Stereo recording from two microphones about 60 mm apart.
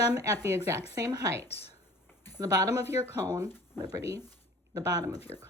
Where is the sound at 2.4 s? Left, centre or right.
Right.